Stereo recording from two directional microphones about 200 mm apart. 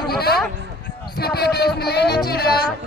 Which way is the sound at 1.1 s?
50° left (ahead or behind).